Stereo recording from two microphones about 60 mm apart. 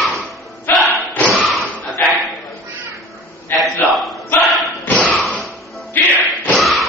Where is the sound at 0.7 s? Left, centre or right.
Left.